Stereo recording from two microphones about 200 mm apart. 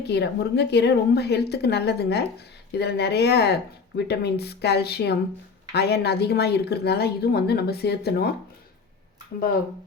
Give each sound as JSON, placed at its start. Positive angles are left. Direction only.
{"t": 0.0, "sound": "a woman's voice", "side_deg": 55}